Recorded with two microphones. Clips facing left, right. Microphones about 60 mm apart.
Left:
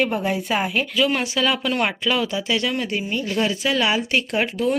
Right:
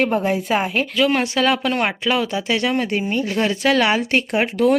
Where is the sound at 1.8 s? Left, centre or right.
Right.